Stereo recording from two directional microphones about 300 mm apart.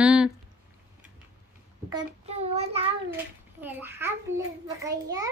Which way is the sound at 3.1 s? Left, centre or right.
Centre.